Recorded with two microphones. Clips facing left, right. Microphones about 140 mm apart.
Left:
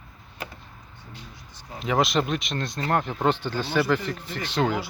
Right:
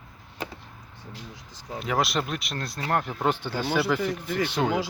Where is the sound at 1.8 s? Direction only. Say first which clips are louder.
Left 3 dB; centre (ahead or behind).